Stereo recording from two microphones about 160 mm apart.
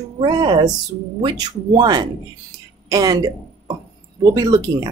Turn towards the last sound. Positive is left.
turn(degrees=-25)  # may be behind; listen again after turning